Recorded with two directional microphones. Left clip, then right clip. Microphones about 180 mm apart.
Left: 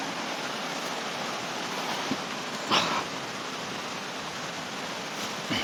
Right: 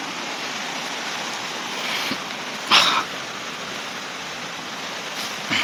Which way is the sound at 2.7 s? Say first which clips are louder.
Right 10 dB; 20° left (ahead or behind).